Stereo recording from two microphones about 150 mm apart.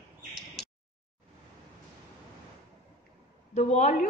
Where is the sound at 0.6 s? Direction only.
Centre (ahead or behind).